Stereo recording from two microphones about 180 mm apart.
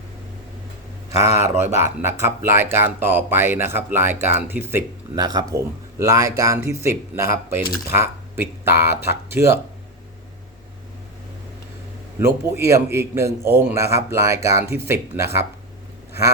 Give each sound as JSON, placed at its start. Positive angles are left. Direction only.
{"t": 1.4, "sound": "speech", "side_deg": -15}
{"t": 12.2, "sound": "speech", "side_deg": -15}